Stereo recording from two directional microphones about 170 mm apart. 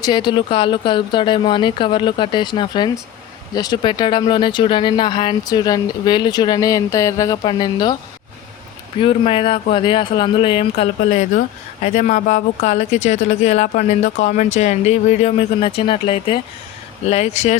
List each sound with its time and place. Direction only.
0.0 s speech: 25° left (ahead or behind)
9.0 s speech: 30° left (ahead or behind)
11.1 s speech: 40° left (ahead or behind)